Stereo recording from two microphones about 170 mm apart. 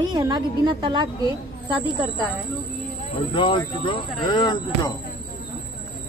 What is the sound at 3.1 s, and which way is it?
Speech, 30° left (ahead or behind).